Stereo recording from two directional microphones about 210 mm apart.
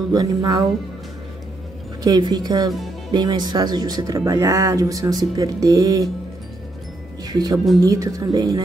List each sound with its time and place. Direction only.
0.1 s speech: 20° right (ahead or behind)
2.0 s speech: 20° right (ahead or behind)
7.2 s speech: 20° right (ahead or behind)